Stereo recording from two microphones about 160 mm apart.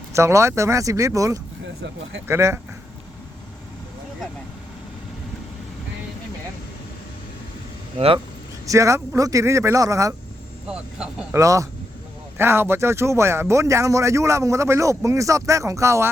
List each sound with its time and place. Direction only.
0.1 s a man's voice: 15° right (ahead or behind)
7.9 s speech: 35° right (ahead or behind)
8.6 s a man's voice: 20° right (ahead or behind)
10.7 s speech: 5° right (ahead or behind)
11.3 s a man's voice: 20° right (ahead or behind)